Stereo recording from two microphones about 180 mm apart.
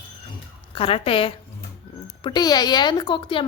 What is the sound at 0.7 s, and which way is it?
A woman's voice, 30° left (ahead or behind).